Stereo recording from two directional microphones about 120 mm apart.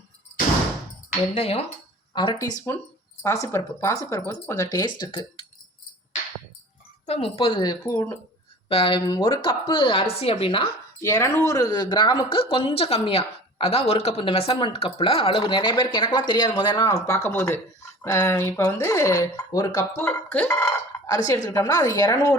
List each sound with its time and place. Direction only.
1.3 s speech: 60° left (ahead or behind)
2.1 s speech: 40° left (ahead or behind)
3.2 s speech: 25° left (ahead or behind); by 5.5 s 40° left (ahead or behind)
7.0 s speech: 55° left (ahead or behind)
7.6 s speech: 30° left (ahead or behind)
8.7 s speech: 50° left (ahead or behind)
11.0 s speech: 25° left (ahead or behind)